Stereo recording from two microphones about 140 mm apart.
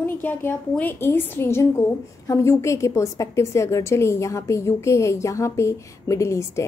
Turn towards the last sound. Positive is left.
turn(degrees=20)  # may be behind; listen again after turning